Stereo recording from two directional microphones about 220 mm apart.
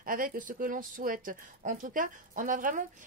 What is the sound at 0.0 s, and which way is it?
Speech, 40° right (ahead or behind).